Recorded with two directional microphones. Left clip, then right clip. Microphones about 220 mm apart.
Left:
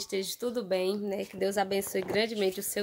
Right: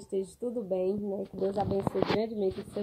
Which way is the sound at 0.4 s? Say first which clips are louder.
Left 3 dB; 30° left (ahead or behind).